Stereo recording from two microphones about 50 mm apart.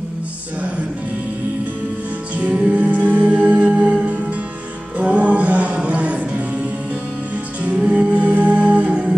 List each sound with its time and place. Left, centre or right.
2.3 s music: right
7.8 s humming: right